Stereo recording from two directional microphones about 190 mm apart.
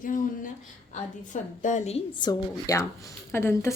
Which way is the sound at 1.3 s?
40° left (ahead or behind).